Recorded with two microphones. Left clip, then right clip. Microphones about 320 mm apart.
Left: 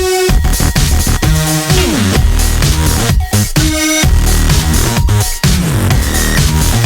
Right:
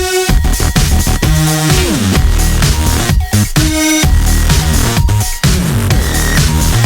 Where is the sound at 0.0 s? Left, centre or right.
Centre.